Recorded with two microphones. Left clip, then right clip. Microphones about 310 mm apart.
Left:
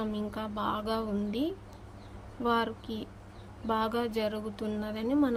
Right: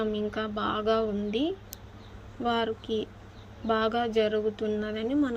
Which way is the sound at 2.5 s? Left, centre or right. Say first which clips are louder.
Right 2 dB; centre.